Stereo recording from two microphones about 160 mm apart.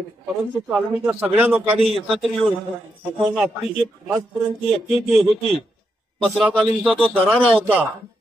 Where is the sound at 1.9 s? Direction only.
Centre (ahead or behind).